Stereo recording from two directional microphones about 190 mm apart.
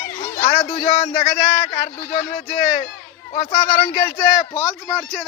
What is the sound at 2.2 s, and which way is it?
Speech, 35° left (ahead or behind).